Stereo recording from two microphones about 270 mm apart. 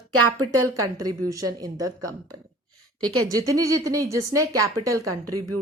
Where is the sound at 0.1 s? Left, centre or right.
Right.